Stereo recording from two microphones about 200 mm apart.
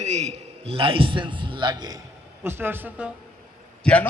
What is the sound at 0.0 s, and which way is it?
A man's voice, 35° right (ahead or behind).